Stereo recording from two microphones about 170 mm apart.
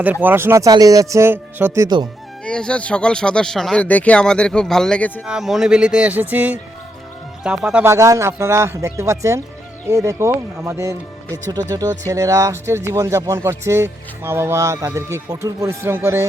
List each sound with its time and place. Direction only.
0.0 s speech: 10° right (ahead or behind)
2.4 s speech: 5° left (ahead or behind)
5.2 s speech: 5° right (ahead or behind)